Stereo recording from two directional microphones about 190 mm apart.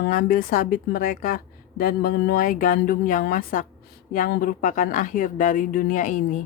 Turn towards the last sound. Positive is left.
turn(degrees=45)  # may be behind; listen again after turning